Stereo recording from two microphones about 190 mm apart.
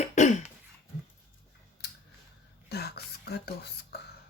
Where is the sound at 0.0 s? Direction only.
40° left (ahead or behind).